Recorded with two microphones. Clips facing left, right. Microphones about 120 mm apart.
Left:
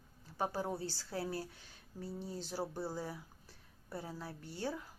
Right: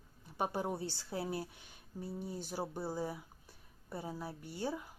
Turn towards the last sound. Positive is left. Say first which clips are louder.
# right 1 dB
turn(degrees=-15)  # may be behind; listen again after turning